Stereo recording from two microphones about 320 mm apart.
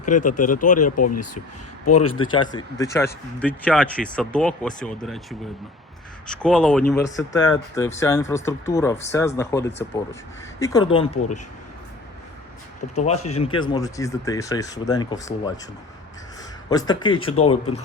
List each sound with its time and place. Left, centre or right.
0.0 s speech: left
0.9 s speech: left
2.3 s speech: centre
6.2 s speech: centre
12.9 s speech: left
16.6 s speech: centre